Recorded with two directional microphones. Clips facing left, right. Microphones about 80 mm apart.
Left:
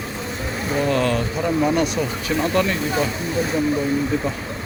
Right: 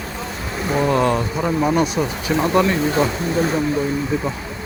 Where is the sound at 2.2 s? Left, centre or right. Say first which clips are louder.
Right 4 dB; right.